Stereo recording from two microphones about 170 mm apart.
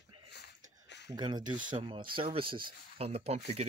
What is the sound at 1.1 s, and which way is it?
Speech, 25° right (ahead or behind).